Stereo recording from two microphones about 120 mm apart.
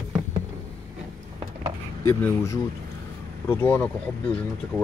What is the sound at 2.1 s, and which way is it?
Speech, 20° left (ahead or behind).